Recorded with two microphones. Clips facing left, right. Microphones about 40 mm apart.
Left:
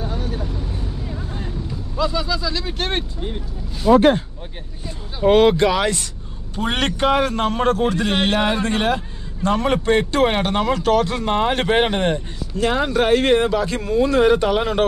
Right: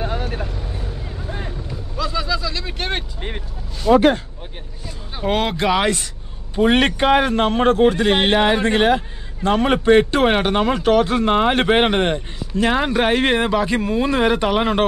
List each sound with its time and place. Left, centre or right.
0.0 s vehicle: right
1.7 s vehicle: centre
3.2 s speech: right
3.8 s speech: centre
5.2 s speech: centre
6.5 s a man's voice: centre